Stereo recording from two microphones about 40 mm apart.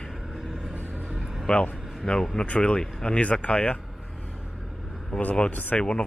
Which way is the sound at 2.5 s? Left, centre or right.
Left.